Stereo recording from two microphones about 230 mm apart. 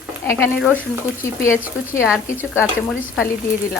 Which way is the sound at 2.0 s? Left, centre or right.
Centre.